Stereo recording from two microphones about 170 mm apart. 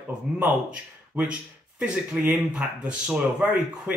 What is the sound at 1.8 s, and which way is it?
Speech, 5° right (ahead or behind).